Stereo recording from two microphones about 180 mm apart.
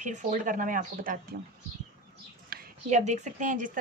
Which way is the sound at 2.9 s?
40° right (ahead or behind).